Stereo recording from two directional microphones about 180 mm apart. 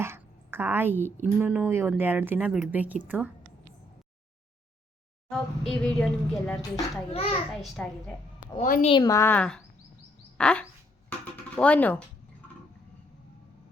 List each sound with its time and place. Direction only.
0.0 s a sound: 15° right (ahead or behind)
1.4 s speech: 10° right (ahead or behind)
5.3 s a woman's voice: centre (ahead or behind)
7.1 s a woman's voice: 35° left (ahead or behind)
7.5 s a woman's voice: 5° left (ahead or behind)
8.5 s a woman's voice: 40° left (ahead or behind)
8.9 s a woman's voice: 20° left (ahead or behind)
10.3 s a sound: 5° left (ahead or behind)
11.5 s a woman's voice: 5° left (ahead or behind)